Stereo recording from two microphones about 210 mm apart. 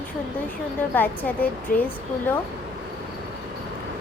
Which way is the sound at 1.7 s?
40° left (ahead or behind).